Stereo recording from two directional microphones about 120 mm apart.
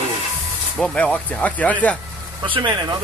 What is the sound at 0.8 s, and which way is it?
Speech, 10° left (ahead or behind).